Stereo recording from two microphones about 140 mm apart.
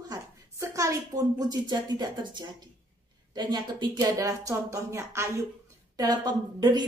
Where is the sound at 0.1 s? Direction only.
25° right (ahead or behind).